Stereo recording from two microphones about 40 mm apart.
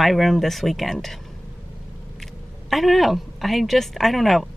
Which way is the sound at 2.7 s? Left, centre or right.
Centre.